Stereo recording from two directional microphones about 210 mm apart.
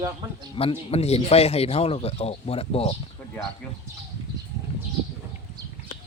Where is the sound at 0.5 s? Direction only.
30° left (ahead or behind).